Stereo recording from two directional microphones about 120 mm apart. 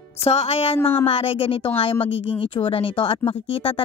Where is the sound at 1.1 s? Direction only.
50° left (ahead or behind).